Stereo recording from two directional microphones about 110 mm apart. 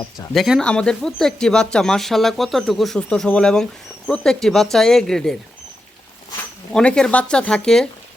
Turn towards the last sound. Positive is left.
turn(degrees=5)  # may be behind; listen again after turning